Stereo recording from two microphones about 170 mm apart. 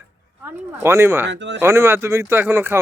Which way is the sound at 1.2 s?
90° right.